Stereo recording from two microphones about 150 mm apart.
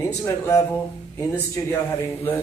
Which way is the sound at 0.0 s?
20° left (ahead or behind).